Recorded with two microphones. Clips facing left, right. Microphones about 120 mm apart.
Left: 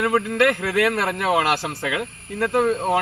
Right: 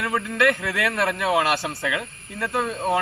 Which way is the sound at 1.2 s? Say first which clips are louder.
Left 2 dB; 55° left (ahead or behind).